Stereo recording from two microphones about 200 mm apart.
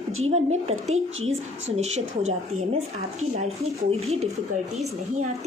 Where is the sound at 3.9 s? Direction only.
30° right (ahead or behind).